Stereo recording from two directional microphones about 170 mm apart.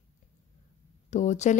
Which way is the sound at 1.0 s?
45° left (ahead or behind).